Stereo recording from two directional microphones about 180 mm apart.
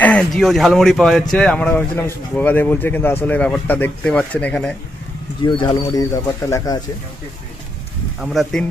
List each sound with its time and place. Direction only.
0.0 s speech: 5° left (ahead or behind)
5.4 s speech: 25° left (ahead or behind)
8.2 s speech: centre (ahead or behind)